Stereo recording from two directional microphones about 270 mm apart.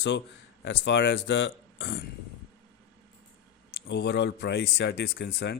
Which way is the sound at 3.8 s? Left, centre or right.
Left.